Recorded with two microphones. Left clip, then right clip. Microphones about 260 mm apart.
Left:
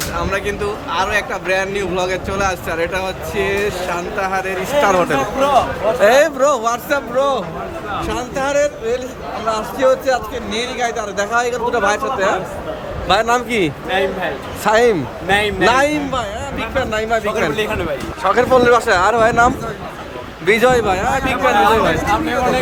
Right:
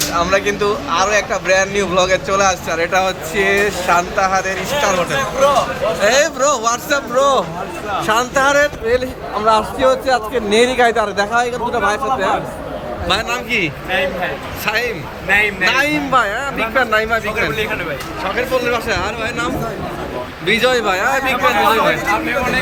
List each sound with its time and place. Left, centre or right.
0.2 s a man's voice: centre
13.1 s a man's voice: centre
20.5 s a man's voice: centre